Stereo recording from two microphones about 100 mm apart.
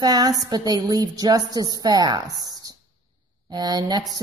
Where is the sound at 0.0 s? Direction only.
40° right (ahead or behind).